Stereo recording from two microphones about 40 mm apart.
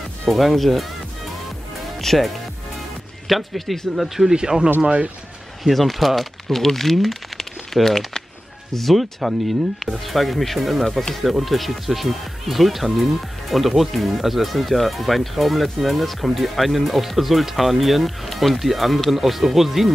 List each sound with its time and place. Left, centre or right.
0.3 s speech: centre
2.0 s speech: centre
4.3 s speech: right
5.6 s speech: centre